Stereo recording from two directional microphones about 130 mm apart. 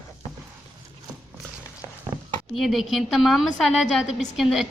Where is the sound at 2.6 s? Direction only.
Centre (ahead or behind).